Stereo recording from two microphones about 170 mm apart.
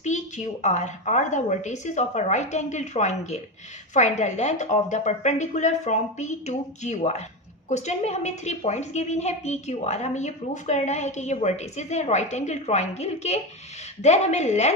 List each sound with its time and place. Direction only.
0.0 s a woman's voice: 45° left (ahead or behind)